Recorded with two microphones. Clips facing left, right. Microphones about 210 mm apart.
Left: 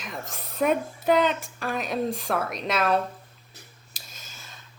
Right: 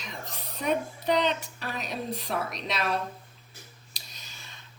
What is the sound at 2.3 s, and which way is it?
Speech, 65° left (ahead or behind).